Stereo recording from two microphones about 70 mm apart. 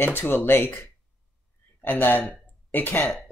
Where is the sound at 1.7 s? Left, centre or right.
Left.